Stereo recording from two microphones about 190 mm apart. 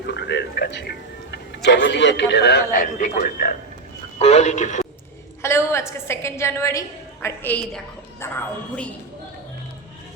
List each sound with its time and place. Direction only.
0.0 s a man's voice: 60° left (ahead or behind); by 4.9 s 40° left (ahead or behind)
5.4 s a woman's voice: 15° left (ahead or behind)